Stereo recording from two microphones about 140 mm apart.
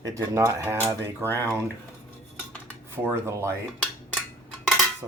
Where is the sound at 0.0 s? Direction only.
20° right (ahead or behind).